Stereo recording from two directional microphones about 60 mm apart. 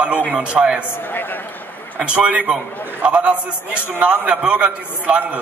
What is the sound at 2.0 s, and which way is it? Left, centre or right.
A man's voice, centre.